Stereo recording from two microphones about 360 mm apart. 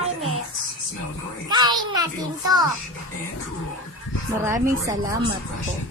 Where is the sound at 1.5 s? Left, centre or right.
Centre.